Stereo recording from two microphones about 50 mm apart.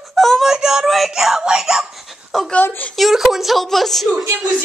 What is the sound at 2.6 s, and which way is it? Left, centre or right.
Speech, left.